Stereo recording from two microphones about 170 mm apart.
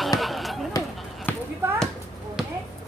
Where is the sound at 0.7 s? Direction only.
20° left (ahead or behind).